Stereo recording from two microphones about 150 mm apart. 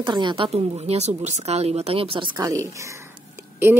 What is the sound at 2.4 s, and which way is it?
Speech, 20° right (ahead or behind).